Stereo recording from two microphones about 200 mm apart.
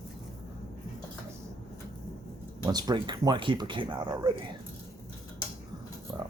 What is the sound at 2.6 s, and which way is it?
Speech, 20° right (ahead or behind).